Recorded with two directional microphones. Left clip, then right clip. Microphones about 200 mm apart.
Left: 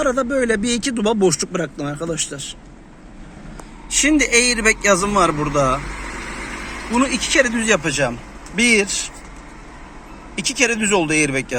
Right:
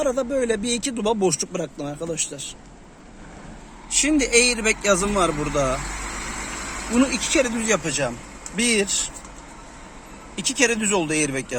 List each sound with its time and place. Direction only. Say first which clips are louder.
0.0 s a man's voice: left 4 dB; 5° right (ahead or behind)
3.8 s a man's voice: left 5 dB; centre (ahead or behind)
5.9 s vehicle: left 2 dB; 60° right (ahead or behind)
7.6 s a man's voice: left 5 dB; 5° right (ahead or behind)
10.3 s a man's voice: left 3 dB; 5° right (ahead or behind)